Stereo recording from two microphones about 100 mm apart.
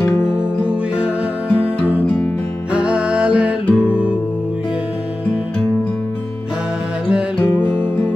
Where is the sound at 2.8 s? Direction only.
10° right (ahead or behind).